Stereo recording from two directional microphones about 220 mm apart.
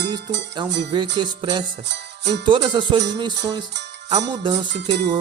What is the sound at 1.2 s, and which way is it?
Music, 20° right (ahead or behind).